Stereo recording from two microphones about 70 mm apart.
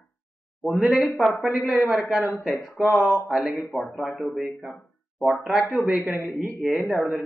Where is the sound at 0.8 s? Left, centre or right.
Centre.